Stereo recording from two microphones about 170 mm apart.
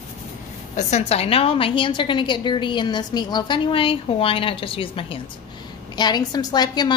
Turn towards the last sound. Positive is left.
turn(degrees=25)  # may be behind; listen again after turning